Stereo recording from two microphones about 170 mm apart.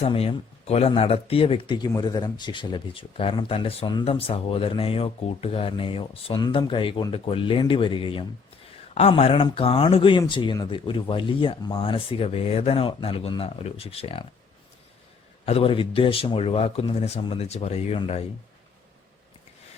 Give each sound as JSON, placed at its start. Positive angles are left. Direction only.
{"t": 0.0, "sound": "speech", "side_deg": 35}
{"t": 15.4, "sound": "speech", "side_deg": 35}